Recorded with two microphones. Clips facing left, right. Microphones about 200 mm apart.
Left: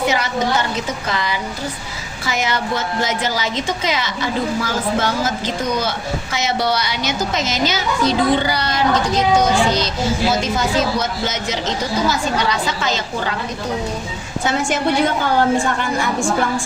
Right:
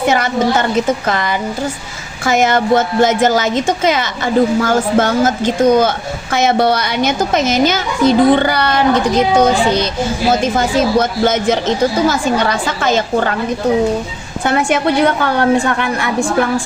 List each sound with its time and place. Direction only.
1.0 s a woman's voice: 50° right (ahead or behind)
14.4 s a woman's voice: 60° right (ahead or behind)